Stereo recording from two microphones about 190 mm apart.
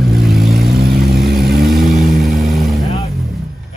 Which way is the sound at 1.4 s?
55° right (ahead or behind).